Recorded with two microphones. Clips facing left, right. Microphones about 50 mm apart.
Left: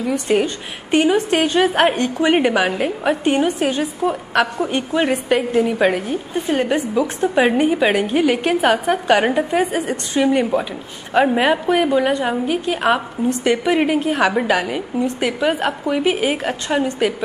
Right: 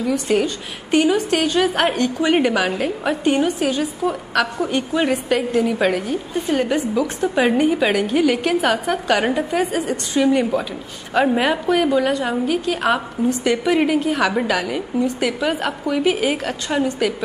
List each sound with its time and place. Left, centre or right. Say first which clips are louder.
0.3 s a woman's voice: left 1 dB; centre